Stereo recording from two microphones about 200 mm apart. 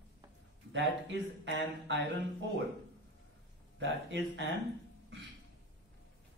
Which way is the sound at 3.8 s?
65° right (ahead or behind).